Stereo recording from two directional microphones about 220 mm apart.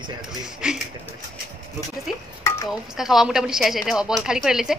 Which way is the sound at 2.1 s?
Centre (ahead or behind).